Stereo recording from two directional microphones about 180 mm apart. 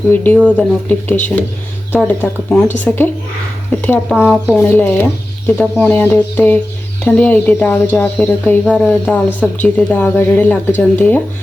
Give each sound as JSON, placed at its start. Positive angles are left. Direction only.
{"t": 0.1, "sound": "speech", "side_deg": 10}
{"t": 4.1, "sound": "speech", "side_deg": -5}
{"t": 4.5, "sound": "speech", "side_deg": 10}